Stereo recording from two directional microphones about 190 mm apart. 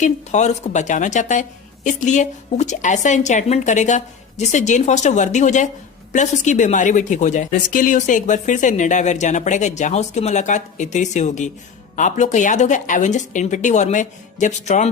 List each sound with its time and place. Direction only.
0.0 s a woman's voice: 35° left (ahead or behind)